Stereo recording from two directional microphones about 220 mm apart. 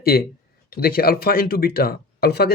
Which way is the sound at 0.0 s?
45° left (ahead or behind).